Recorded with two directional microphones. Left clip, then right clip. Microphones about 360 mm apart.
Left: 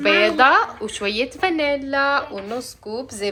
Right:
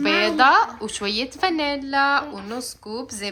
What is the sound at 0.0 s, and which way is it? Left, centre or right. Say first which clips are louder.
A woman's voice: left 2 dB; centre.